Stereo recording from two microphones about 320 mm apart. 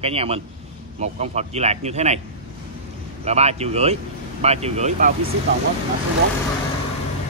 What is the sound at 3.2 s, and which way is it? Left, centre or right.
Speech, centre.